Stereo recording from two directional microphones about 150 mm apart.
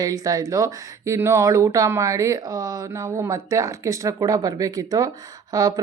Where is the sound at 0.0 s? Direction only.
25° right (ahead or behind).